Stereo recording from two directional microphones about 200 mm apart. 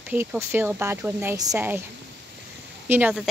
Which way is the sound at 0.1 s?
10° right (ahead or behind).